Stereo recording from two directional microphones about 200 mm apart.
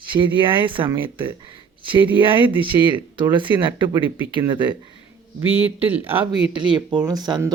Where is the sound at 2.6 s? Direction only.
25° right (ahead or behind).